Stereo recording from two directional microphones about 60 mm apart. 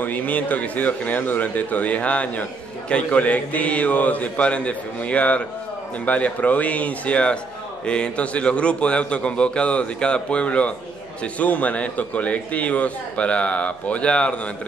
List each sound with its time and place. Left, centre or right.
0.0 s a man's voice: left